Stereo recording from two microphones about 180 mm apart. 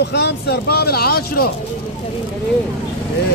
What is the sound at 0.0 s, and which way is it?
Speech, 70° left (ahead or behind).